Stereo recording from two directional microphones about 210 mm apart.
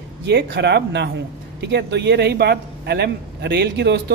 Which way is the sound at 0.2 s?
55° right (ahead or behind).